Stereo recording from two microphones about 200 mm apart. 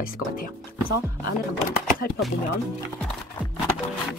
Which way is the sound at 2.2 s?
Centre (ahead or behind).